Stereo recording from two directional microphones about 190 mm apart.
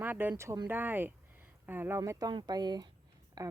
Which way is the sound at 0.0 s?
10° right (ahead or behind).